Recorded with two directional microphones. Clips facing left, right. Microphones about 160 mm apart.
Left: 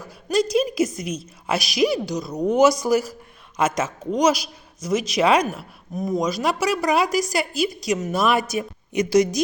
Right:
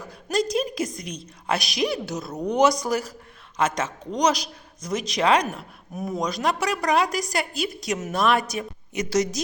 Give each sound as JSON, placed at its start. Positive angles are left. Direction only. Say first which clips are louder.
{"t": 0.1, "sound": "a woman's voice", "louder": "left 4 dB", "side_deg": 0}
{"t": 5.9, "sound": "a woman's voice", "louder": "left 4 dB", "side_deg": -5}